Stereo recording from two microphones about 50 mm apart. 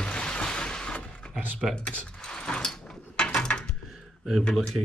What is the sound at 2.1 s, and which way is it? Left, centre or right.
Mechanisms, centre.